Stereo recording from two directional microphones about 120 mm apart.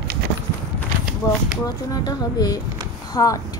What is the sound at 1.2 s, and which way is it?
Speech, 30° left (ahead or behind).